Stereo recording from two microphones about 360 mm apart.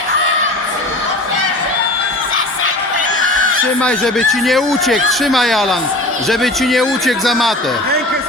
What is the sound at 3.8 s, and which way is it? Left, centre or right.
Speech, centre.